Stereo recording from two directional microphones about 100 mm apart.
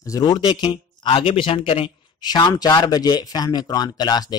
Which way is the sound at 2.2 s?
45° left (ahead or behind).